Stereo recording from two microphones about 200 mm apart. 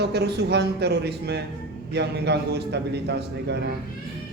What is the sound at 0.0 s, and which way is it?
A man's voice, 55° right (ahead or behind).